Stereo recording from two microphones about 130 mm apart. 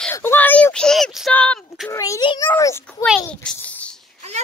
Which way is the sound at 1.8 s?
25° left (ahead or behind).